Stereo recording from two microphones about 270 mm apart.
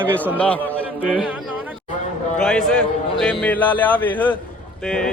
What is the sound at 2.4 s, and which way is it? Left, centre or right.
A man's voice, centre.